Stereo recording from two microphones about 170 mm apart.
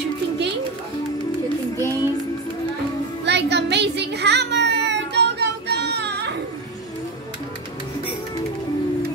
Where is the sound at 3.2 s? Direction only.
85° right.